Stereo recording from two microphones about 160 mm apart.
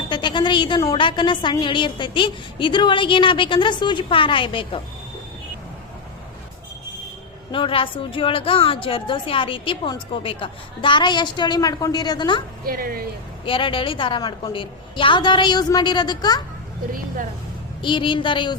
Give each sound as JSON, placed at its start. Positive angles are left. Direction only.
{"t": 0.1, "sound": "a woman's voice", "side_deg": 30}
{"t": 7.5, "sound": "a woman's voice", "side_deg": 35}
{"t": 12.6, "sound": "speech", "side_deg": -65}
{"t": 13.4, "sound": "a woman's voice", "side_deg": 35}
{"t": 17.8, "sound": "a woman's voice", "side_deg": 30}